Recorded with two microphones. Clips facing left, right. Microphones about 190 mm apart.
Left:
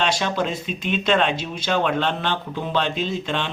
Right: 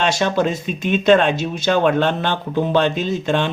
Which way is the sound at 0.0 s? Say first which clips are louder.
Right 5 dB; 45° right (ahead or behind).